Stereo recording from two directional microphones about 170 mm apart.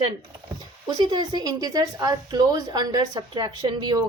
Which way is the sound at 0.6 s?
25° right (ahead or behind).